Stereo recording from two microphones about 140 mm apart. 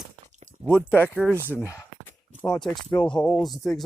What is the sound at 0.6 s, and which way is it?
Speech, 15° left (ahead or behind).